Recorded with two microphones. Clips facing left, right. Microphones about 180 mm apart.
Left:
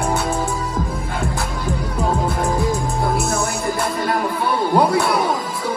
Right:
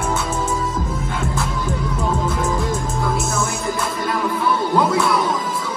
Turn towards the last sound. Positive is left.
turn(degrees=60)  # may be behind; listen again after turning